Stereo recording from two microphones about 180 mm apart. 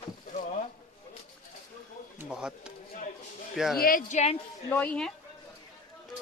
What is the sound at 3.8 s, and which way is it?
Speech, 45° left (ahead or behind).